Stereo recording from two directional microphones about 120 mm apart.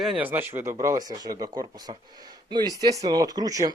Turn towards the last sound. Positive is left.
turn(degrees=-30)  # may be behind; listen again after turning